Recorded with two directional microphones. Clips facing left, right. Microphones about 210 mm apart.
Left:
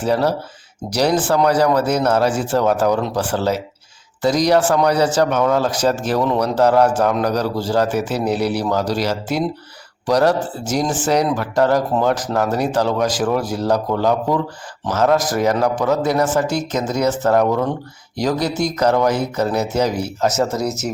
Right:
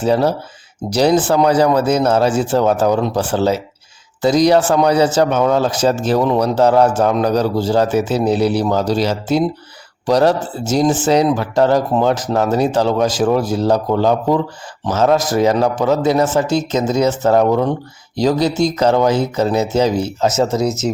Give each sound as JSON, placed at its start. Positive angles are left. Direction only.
{"t": 0.0, "sound": "speech", "side_deg": -25}